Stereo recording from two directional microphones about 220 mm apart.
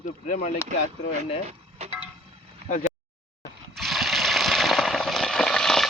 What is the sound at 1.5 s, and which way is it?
Dishes, 30° right (ahead or behind).